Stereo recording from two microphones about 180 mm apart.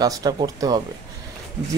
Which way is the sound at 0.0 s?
20° right (ahead or behind).